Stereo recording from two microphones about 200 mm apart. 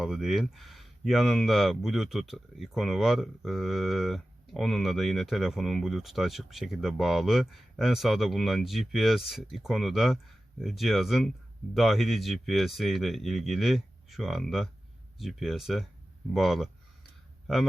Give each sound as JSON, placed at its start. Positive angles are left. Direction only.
{"t": 0.0, "sound": "speech", "side_deg": 0}